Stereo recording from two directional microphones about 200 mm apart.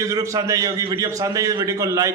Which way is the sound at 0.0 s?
15° right (ahead or behind).